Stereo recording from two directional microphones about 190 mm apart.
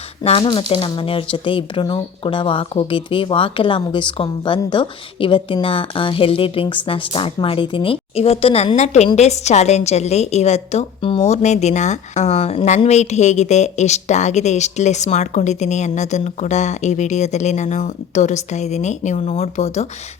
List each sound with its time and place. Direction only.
0.2 s speech: 30° left (ahead or behind)